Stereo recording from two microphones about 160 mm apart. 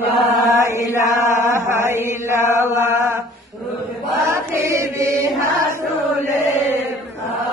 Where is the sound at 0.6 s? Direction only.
20° right (ahead or behind).